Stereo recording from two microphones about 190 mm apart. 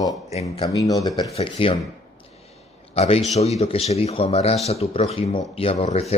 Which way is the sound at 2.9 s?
30° left (ahead or behind).